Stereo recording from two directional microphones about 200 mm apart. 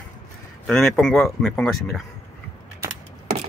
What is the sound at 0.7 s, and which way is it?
Speech, centre (ahead or behind).